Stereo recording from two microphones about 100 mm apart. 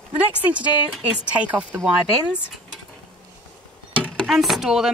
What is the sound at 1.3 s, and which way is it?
Speech, 15° right (ahead or behind).